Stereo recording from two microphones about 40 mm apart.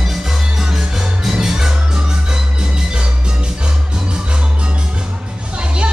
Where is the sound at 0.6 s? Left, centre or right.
Centre.